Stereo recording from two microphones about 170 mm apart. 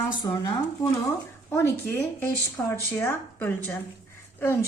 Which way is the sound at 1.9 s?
10° left (ahead or behind).